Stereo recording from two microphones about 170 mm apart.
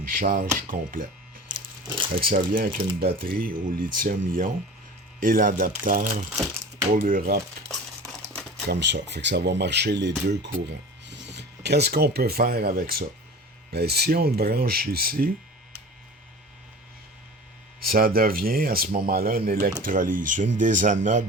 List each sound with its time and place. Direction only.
0.0 s speech: 55° right (ahead or behind)
2.2 s speech: 55° right (ahead or behind)
8.3 s typewriter: 5° left (ahead or behind)
8.7 s speech: 90° right; by 15.3 s 60° right (ahead or behind)
17.8 s speech: 60° right (ahead or behind)